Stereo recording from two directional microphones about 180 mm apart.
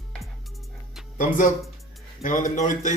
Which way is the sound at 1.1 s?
45° left (ahead or behind).